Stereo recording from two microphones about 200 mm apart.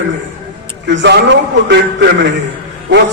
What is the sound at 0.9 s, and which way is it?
A man's voice, 60° right (ahead or behind).